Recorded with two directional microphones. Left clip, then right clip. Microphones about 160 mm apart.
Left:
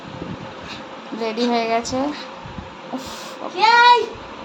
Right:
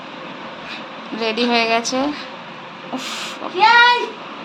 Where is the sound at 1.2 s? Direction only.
10° left (ahead or behind).